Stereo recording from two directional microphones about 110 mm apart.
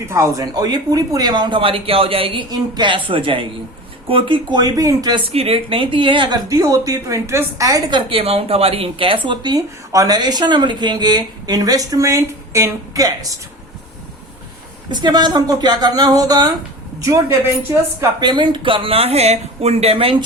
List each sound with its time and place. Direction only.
0.1 s speech: 30° right (ahead or behind); by 2.4 s 55° right (ahead or behind)
2.5 s speech: 40° right (ahead or behind)
5.3 s speech: 65° right (ahead or behind); by 8.2 s 45° right (ahead or behind)
8.2 s speech: 65° right (ahead or behind); by 9.6 s 45° right (ahead or behind)
9.6 s speech: 30° right (ahead or behind)
14.8 s a woman's voice: 45° right (ahead or behind)
18.2 s speech: 40° right (ahead or behind); by 20.2 s 60° right (ahead or behind)